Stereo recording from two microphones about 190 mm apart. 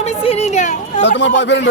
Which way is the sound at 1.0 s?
70° left (ahead or behind).